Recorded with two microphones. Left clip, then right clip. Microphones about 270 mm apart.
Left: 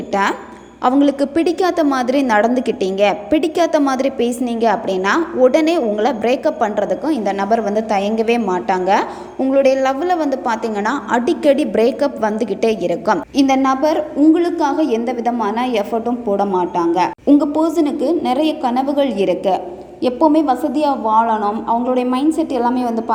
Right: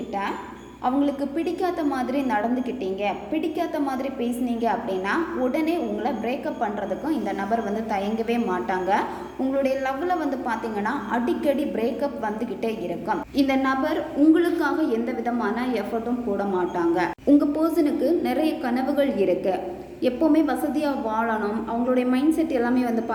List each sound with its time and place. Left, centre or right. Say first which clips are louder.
0.1 s a woman's voice: left 12 dB; left
13.5 s a woman's voice: left 9 dB; left